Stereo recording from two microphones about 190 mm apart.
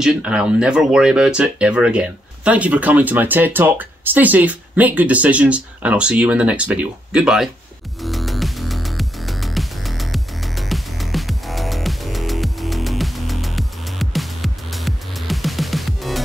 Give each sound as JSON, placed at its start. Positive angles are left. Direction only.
{"t": 0.0, "sound": "speech", "side_deg": -5}
{"t": 8.0, "sound": "music", "side_deg": 0}